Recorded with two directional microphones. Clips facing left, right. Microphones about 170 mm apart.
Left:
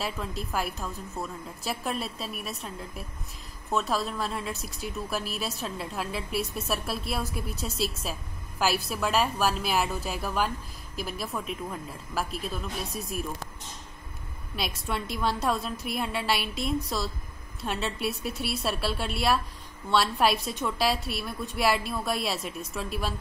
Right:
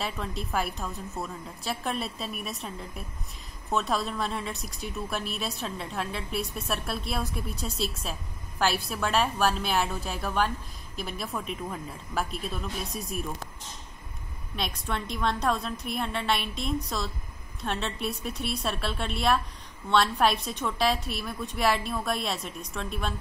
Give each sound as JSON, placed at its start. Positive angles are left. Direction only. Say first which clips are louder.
{"t": 0.0, "sound": "a woman's voice", "louder": "even", "side_deg": 0}
{"t": 3.7, "sound": "a woman's voice", "louder": "even", "side_deg": 0}
{"t": 14.5, "sound": "a woman's voice", "louder": "even", "side_deg": 5}